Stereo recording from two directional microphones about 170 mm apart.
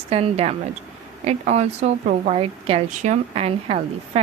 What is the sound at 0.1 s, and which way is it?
A woman's voice, 35° right (ahead or behind).